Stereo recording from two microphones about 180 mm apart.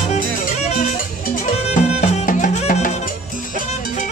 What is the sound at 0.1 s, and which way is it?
Music, 40° left (ahead or behind).